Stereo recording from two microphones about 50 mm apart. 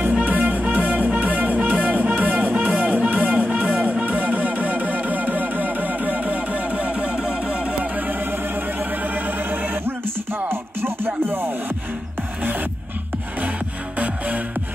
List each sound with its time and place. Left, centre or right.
0.2 s music: right; by 7.9 s centre
7.9 s music: right
10.5 s music: right
13.9 s music: right